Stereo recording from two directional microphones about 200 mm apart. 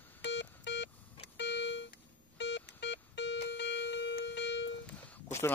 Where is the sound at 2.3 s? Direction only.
60° left (ahead or behind).